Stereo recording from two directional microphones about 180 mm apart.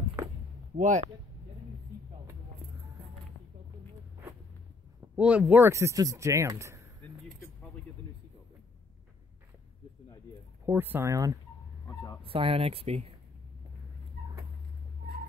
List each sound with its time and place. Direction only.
0.7 s speech: 45° right (ahead or behind)
5.1 s speech: 10° right (ahead or behind)
10.6 s speech: 10° right (ahead or behind)
12.2 s speech: 30° right (ahead or behind)